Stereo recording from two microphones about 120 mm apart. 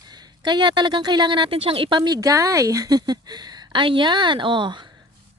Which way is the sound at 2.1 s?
30° right (ahead or behind).